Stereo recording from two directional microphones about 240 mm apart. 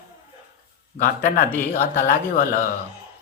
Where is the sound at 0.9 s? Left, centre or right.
Left.